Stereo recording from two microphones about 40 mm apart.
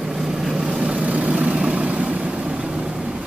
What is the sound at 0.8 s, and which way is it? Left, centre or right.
Vehicle, right.